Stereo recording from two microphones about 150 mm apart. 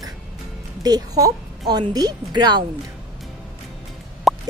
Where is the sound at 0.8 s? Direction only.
25° right (ahead or behind).